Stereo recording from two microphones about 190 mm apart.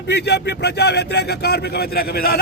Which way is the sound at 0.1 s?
60° left (ahead or behind).